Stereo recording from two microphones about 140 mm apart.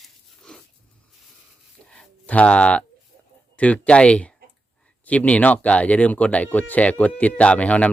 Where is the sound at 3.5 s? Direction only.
10° left (ahead or behind).